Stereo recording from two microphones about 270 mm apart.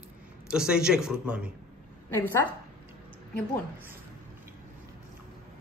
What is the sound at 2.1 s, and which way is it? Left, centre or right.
Speech, centre.